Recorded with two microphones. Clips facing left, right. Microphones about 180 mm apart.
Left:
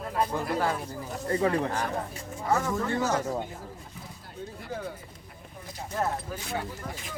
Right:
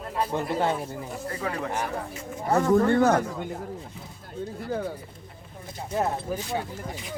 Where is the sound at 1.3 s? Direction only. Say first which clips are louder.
Left 7 dB; 30° left (ahead or behind).